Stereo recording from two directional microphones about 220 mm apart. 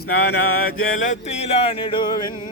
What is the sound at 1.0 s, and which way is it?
Music, 30° left (ahead or behind).